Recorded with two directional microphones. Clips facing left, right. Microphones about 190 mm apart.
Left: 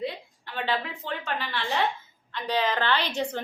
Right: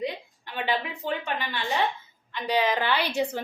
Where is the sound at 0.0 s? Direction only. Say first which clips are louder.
Right 1 dB; 15° right (ahead or behind).